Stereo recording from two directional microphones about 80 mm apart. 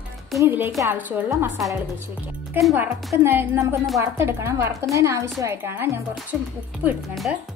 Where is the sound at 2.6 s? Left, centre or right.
Right.